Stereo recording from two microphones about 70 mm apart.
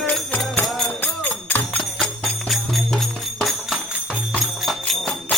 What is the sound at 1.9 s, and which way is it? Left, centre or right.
Music, centre.